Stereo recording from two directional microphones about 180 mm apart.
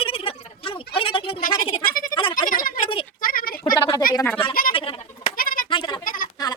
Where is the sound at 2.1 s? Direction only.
30° left (ahead or behind).